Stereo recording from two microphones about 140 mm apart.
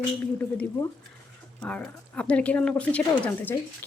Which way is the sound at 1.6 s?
10° left (ahead or behind).